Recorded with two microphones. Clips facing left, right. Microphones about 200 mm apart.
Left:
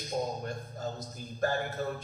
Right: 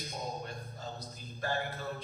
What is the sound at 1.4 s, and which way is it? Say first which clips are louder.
Speech: left 5 dB; 45° left (ahead or behind).